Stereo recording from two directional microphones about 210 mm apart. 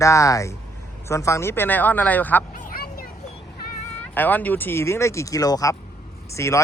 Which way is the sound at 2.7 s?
45° left (ahead or behind).